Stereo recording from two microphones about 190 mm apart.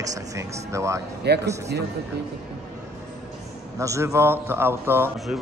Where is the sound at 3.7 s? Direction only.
15° right (ahead or behind).